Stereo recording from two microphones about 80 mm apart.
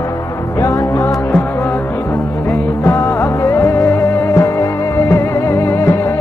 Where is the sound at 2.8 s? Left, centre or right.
Left.